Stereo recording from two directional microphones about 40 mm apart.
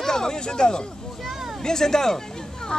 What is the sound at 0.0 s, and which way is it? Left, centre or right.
Speech, centre.